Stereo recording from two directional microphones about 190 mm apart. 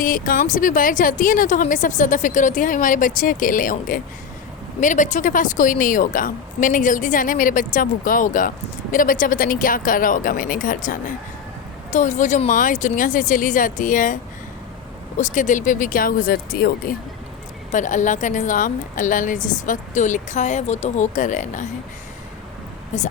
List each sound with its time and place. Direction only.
0.0 s a woman's voice: 45° left (ahead or behind)
15.2 s a woman's voice: 40° left (ahead or behind)
22.9 s a woman's voice: 40° left (ahead or behind)